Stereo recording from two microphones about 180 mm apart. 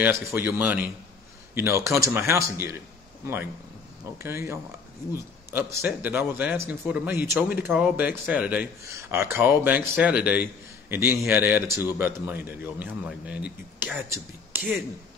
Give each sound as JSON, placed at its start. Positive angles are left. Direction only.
{"t": 0.0, "sound": "a man's voice", "side_deg": -10}
{"t": 4.2, "sound": "a man's voice", "side_deg": -15}